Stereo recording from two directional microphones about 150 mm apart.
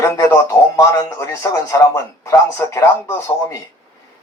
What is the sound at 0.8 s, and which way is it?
Speech, 20° left (ahead or behind).